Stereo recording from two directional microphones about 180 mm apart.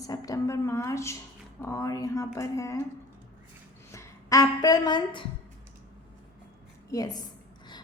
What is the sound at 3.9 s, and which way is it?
A woman's voice, 20° left (ahead or behind).